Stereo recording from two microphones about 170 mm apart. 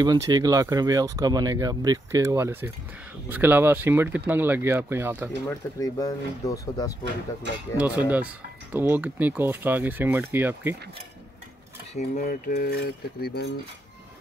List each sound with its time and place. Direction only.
0.0 s speech: 25° right (ahead or behind)
5.8 s speech: 20° left (ahead or behind)
7.7 s speech: 10° right (ahead or behind)
11.9 s cutlery: 45° left (ahead or behind); by 13.5 s 65° left (ahead or behind)